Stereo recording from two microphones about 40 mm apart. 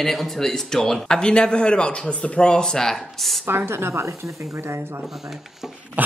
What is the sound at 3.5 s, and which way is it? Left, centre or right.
Speech, right.